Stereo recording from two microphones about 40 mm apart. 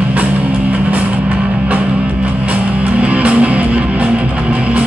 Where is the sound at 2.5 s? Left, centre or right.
Right.